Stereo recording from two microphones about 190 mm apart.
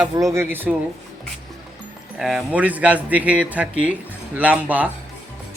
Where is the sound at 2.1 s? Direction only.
5° right (ahead or behind).